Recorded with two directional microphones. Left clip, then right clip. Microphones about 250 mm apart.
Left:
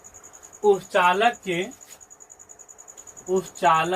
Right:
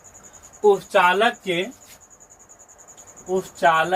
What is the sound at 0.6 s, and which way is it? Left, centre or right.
Speech, centre.